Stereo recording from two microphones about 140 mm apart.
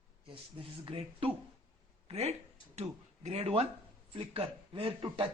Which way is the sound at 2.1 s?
50° right (ahead or behind).